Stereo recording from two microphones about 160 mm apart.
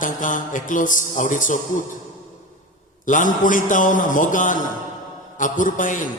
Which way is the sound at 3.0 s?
55° left (ahead or behind).